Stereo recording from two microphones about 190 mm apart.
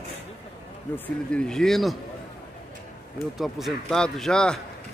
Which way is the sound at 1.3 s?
5° left (ahead or behind).